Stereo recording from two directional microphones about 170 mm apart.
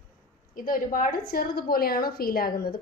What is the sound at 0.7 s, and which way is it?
A woman's voice, 55° left (ahead or behind).